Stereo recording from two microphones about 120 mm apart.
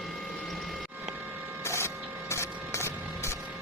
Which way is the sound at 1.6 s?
20° left (ahead or behind).